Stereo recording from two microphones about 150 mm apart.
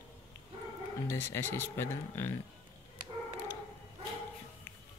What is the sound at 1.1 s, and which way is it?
Speech, 15° left (ahead or behind).